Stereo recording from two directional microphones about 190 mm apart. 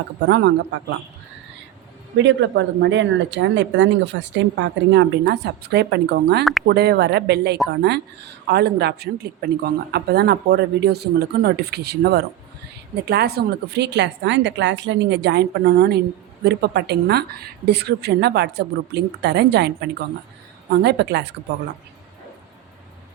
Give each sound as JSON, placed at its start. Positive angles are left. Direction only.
{"t": 0.3, "sound": "speech", "side_deg": -65}
{"t": 2.1, "sound": "speech", "side_deg": -70}
{"t": 6.4, "sound": "speech", "side_deg": 0}
{"t": 6.7, "sound": "a woman's voice", "side_deg": -60}